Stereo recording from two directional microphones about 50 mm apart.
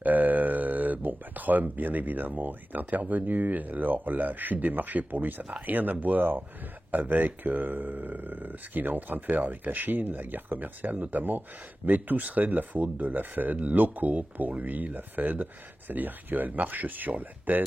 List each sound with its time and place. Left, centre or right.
0.0 s speech: right